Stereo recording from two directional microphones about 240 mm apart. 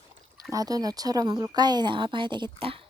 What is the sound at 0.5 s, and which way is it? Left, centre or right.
A woman's voice, centre.